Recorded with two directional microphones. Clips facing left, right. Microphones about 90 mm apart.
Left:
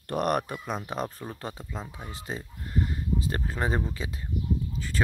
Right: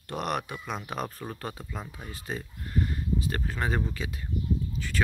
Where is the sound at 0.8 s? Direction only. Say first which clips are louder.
Left 1 dB; 30° left (ahead or behind).